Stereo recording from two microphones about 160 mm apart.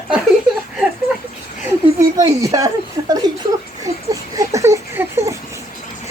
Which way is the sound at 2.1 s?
20° right (ahead or behind).